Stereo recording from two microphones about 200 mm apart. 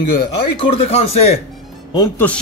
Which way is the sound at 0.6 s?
30° left (ahead or behind).